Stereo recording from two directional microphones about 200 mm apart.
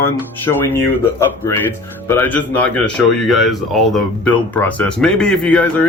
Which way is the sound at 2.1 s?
10° left (ahead or behind).